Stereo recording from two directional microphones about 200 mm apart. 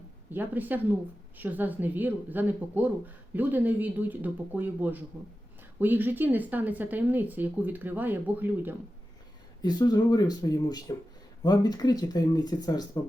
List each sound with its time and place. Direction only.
0.3 s speech: 10° right (ahead or behind)
9.6 s speech: 20° left (ahead or behind)